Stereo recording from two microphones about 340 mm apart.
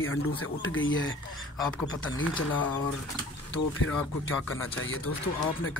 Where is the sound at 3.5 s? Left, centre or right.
Left.